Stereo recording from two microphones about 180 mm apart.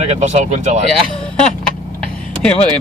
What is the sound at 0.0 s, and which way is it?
Speech, 40° right (ahead or behind).